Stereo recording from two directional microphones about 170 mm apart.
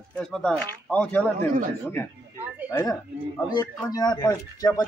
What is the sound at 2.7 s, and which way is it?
Speech, 20° left (ahead or behind).